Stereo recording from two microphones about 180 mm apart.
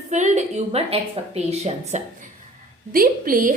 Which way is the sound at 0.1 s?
40° right (ahead or behind).